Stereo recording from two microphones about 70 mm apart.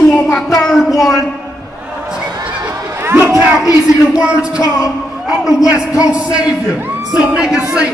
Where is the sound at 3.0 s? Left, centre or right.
Right.